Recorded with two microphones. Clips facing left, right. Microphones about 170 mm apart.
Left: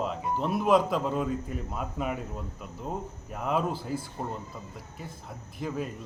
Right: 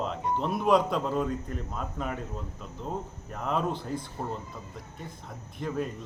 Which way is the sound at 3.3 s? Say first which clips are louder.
Left 1 dB; 5° left (ahead or behind).